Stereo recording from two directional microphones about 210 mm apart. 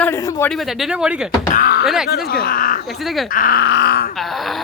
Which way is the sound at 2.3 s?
45° left (ahead or behind).